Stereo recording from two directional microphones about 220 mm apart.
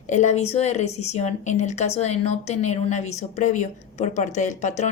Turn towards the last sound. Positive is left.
turn(degrees=35)  # may be behind; listen again after turning